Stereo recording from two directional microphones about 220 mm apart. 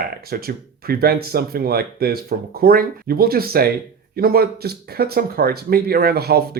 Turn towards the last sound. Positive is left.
turn(degrees=-45)  # may be behind; listen again after turning